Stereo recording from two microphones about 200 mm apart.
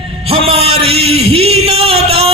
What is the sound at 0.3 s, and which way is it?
Music, 30° right (ahead or behind).